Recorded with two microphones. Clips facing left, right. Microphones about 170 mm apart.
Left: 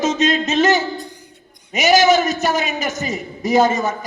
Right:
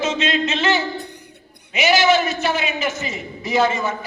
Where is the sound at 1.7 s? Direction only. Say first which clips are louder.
Left 3 dB; 40° left (ahead or behind).